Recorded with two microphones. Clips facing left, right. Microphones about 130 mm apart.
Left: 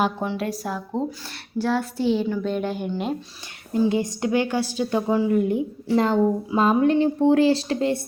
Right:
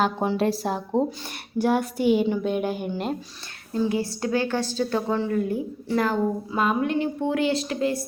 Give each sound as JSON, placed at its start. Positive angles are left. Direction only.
{"t": 0.3, "sound": "a woman's voice", "side_deg": -30}
{"t": 1.5, "sound": "a child's voice", "side_deg": -15}
{"t": 3.7, "sound": "a woman's voice", "side_deg": 20}